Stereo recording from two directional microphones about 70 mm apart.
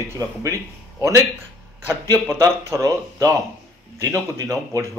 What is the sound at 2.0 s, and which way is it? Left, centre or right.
Speech, right.